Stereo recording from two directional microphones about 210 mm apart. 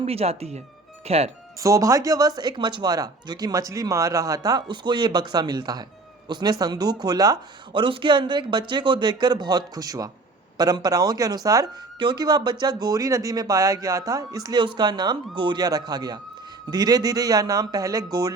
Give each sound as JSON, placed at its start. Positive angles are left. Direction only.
{"t": 0.0, "sound": "speech", "side_deg": -30}
{"t": 1.5, "sound": "speech", "side_deg": -15}